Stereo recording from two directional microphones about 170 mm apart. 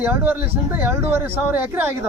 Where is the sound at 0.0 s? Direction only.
10° right (ahead or behind).